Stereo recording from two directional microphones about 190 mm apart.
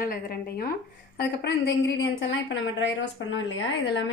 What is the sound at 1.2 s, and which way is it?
A woman's voice, 60° left (ahead or behind).